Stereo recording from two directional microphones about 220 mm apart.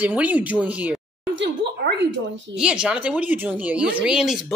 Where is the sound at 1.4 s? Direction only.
55° right (ahead or behind).